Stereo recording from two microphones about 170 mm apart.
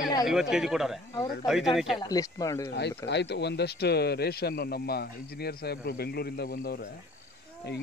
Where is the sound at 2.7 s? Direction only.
85° left; by 6.8 s 65° left (ahead or behind).